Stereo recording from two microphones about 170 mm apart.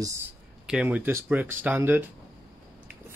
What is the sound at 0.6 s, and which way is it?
Speech, 5° right (ahead or behind).